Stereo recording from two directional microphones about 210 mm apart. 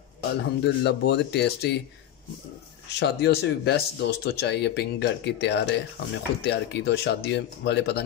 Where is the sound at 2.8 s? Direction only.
50° left (ahead or behind).